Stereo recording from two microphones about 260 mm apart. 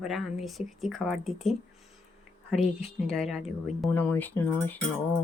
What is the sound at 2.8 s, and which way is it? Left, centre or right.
Speech, centre.